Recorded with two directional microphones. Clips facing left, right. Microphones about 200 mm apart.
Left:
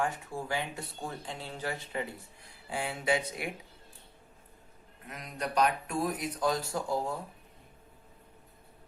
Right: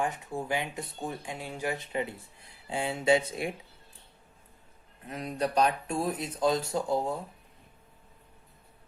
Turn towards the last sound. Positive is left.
turn(degrees=-20)  # may be behind; listen again after turning